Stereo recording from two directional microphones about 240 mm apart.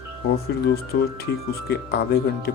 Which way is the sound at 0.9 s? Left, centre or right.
Left.